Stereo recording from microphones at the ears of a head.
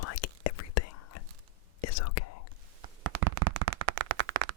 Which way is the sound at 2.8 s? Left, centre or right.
Right.